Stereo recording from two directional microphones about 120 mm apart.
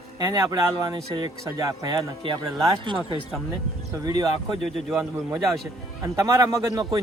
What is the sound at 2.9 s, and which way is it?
Speech, 40° right (ahead or behind).